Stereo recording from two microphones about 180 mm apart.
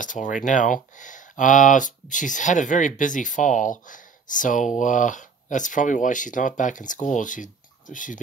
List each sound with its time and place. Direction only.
0.0 s speech: 45° left (ahead or behind)